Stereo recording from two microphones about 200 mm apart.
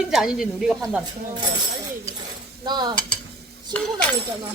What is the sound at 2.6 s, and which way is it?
Stir, 20° right (ahead or behind).